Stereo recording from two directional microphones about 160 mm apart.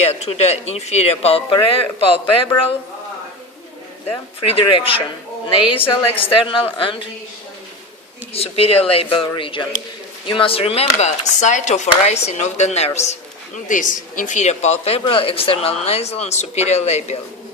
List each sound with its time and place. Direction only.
0.0 s speech: 40° left (ahead or behind)
4.1 s speech: 35° left (ahead or behind)
5.8 s a woman's voice: 10° left (ahead or behind)
6.3 s speech: 30° left (ahead or behind)
8.3 s speech: 40° left (ahead or behind)